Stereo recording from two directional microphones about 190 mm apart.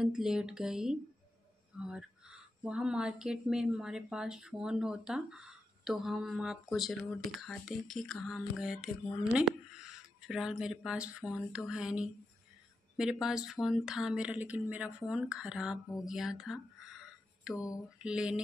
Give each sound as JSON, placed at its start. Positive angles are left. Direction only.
{"t": 0.0, "sound": "speech", "side_deg": -5}
{"t": 17.6, "sound": "mantra", "side_deg": 15}
{"t": 18.0, "sound": "speech", "side_deg": -5}